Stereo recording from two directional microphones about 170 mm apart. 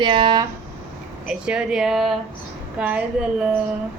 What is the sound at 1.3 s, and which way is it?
Speech, 5° right (ahead or behind).